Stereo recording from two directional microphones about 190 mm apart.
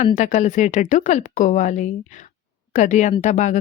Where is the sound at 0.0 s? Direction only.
40° left (ahead or behind).